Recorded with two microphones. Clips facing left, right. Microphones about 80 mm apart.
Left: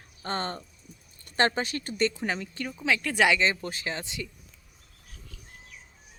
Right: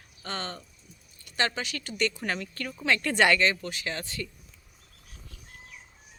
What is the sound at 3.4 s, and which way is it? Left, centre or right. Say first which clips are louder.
Speech: even; left.